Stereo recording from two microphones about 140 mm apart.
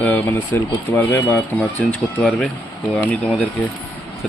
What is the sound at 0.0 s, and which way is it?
Speech, 15° left (ahead or behind).